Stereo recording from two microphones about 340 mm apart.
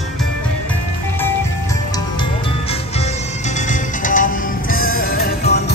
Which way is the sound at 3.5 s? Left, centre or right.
Left.